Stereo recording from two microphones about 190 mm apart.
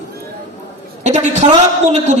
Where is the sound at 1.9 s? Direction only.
35° right (ahead or behind).